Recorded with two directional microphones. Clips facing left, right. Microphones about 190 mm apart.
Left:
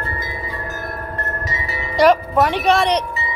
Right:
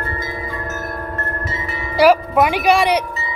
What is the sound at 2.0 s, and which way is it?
Music, 10° right (ahead or behind).